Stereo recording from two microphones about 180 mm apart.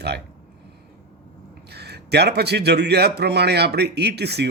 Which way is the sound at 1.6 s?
65° right (ahead or behind).